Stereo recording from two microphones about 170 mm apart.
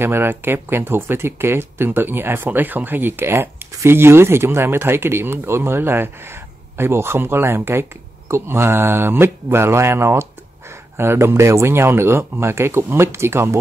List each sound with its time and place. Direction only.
0.0 s speech: 15° right (ahead or behind)